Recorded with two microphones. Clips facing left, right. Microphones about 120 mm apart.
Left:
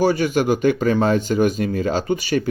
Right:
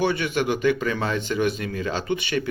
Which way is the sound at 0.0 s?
40° left (ahead or behind).